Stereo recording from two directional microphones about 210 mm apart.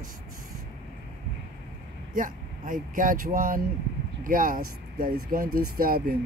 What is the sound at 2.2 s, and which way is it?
Speech, 40° right (ahead or behind).